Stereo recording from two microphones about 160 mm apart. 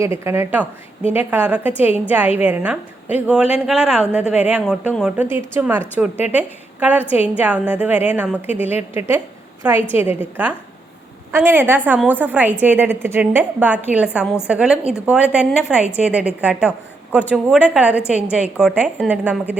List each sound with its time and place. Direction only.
0.0 s a woman's voice: 15° right (ahead or behind)